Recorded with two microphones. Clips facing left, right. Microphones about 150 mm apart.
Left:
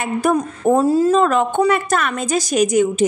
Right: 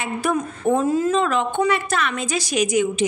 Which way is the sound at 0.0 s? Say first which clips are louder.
Left 5 dB; 45° left (ahead or behind).